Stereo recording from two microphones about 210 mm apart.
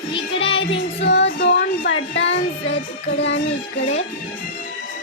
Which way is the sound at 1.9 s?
60° left (ahead or behind).